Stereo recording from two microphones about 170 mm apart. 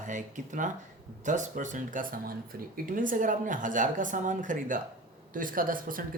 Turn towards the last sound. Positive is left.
turn(degrees=-55)  # may be behind; listen again after turning